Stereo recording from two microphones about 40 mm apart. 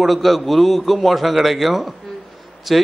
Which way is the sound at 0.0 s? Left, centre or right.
Centre.